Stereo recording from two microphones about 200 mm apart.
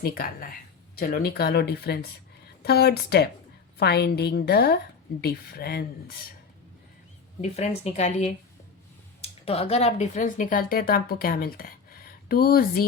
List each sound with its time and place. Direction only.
0.0 s speech: 50° left (ahead or behind)
7.4 s a woman's voice: 30° left (ahead or behind); by 12.8 s 45° left (ahead or behind)